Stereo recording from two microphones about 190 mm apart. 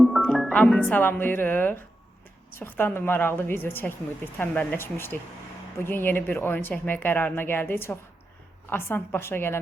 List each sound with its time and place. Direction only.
0.0 s speech: centre (ahead or behind)